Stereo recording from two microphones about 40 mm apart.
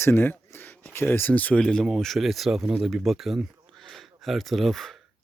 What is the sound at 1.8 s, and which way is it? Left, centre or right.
Speech, centre.